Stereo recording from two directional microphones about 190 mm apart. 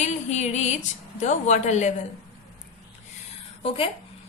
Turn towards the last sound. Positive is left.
turn(degrees=30)  # may be behind; listen again after turning